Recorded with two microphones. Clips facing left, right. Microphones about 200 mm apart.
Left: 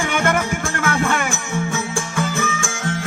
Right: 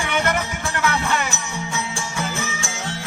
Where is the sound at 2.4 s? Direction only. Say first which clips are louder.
Left 5 dB; 50° left (ahead or behind).